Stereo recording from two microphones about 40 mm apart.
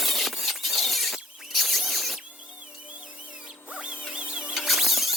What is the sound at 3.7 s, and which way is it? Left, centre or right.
Music, right.